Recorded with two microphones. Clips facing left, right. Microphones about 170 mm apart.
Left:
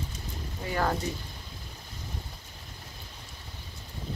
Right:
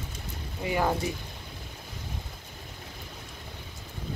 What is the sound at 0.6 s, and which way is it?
Speech, 10° right (ahead or behind).